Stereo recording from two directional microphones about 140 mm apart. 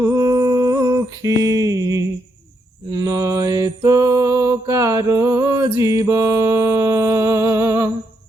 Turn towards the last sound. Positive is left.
turn(degrees=-20)  # may be behind; listen again after turning